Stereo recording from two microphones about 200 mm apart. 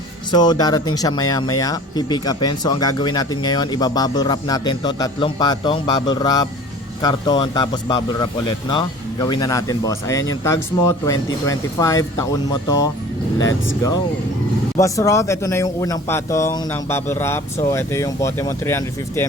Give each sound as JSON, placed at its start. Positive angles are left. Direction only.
{"t": 0.3, "sound": "speech", "side_deg": 20}
{"t": 14.8, "sound": "speech", "side_deg": 15}